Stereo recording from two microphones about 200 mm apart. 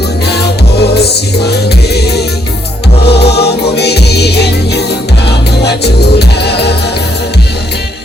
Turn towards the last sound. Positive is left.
turn(degrees=55)  # may be behind; listen again after turning